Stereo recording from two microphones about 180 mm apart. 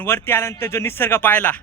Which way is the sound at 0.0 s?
10° left (ahead or behind).